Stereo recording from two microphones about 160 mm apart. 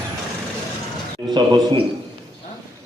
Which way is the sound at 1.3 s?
30° right (ahead or behind).